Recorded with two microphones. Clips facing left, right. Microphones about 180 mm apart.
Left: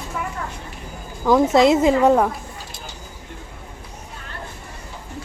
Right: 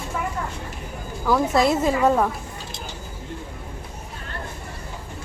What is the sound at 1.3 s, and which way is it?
A woman's voice, 20° left (ahead or behind).